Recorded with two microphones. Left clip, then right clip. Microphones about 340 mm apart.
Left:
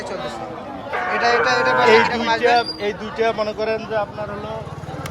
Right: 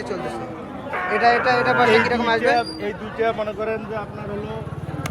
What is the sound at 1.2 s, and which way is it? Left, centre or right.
Speech, centre.